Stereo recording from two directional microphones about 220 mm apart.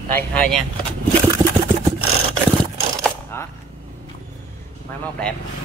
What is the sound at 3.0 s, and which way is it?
Coin, 10° left (ahead or behind).